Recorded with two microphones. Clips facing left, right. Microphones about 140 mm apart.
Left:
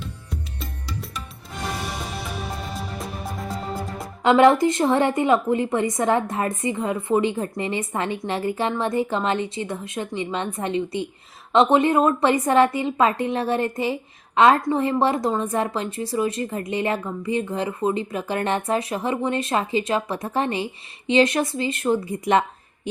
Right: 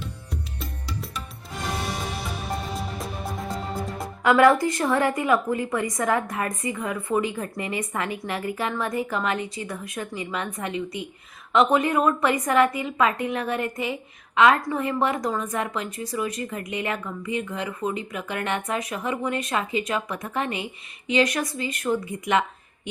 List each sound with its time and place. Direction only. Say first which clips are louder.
0.3 s music: left 1 dB; centre (ahead or behind)
2.7 s music: even; centre (ahead or behind)
4.2 s a woman's voice: left 2 dB; 25° left (ahead or behind)